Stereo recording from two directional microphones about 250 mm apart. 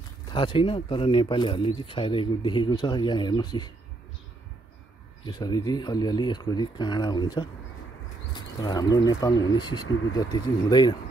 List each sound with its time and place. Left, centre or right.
0.3 s speech: centre
5.2 s speech: centre